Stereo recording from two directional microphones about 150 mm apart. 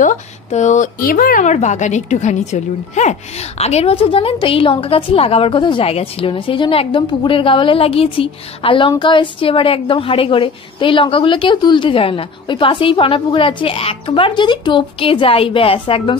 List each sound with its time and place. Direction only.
0.0 s speech: 55° left (ahead or behind)
1.0 s a woman's voice: 70° left (ahead or behind); by 16.2 s 35° left (ahead or behind)